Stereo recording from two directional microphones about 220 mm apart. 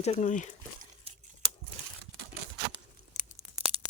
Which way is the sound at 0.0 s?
30° left (ahead or behind).